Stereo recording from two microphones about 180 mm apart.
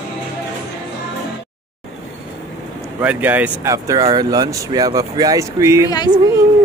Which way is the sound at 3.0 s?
10° right (ahead or behind).